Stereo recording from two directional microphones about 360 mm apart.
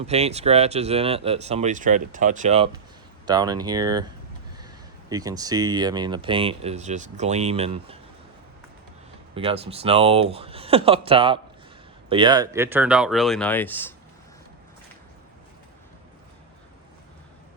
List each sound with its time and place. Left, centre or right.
0.0 s speech: centre
5.0 s speech: centre
9.3 s speech: centre